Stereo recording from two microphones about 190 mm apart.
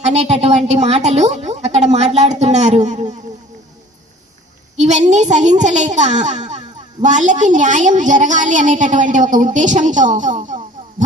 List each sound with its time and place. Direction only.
0.0 s a woman's voice: 35° right (ahead or behind)
4.8 s a woman's voice: 40° right (ahead or behind)